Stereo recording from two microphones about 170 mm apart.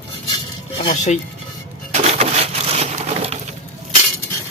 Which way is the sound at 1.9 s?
40° right (ahead or behind).